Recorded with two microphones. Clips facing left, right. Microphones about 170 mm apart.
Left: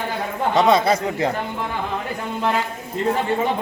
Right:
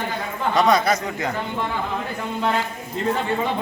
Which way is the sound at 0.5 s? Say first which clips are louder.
Left 2 dB; 25° left (ahead or behind).